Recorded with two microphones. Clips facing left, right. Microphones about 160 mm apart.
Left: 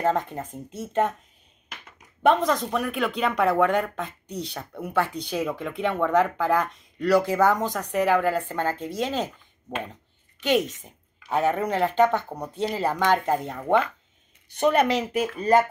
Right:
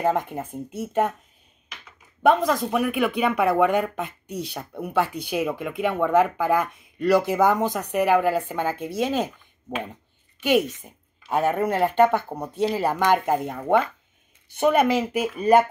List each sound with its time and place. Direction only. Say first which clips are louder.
0.0 s speech: right 1 dB; 15° right (ahead or behind)
2.2 s speech: right 1 dB; 5° right (ahead or behind)